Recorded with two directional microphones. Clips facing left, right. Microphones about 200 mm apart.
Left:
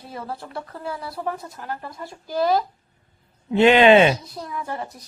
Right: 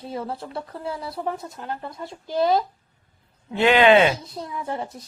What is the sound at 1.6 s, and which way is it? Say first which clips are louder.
Speech: right 1 dB; 20° right (ahead or behind).